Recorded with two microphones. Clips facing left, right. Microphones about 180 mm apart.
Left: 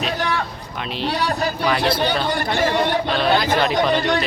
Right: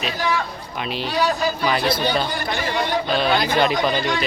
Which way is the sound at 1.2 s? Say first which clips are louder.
Right 4 dB; 60° left (ahead or behind).